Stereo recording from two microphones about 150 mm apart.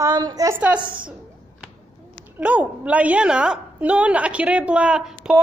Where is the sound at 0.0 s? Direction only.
25° right (ahead or behind).